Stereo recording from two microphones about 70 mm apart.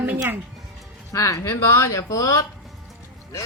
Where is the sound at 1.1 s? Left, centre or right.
Left.